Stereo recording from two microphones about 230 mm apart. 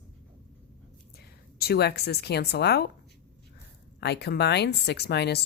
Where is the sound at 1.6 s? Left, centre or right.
Left.